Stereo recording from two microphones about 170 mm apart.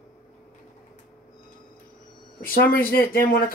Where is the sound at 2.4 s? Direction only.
60° left (ahead or behind).